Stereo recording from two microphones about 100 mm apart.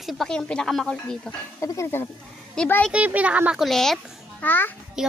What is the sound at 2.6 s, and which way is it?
Speech, 5° left (ahead or behind).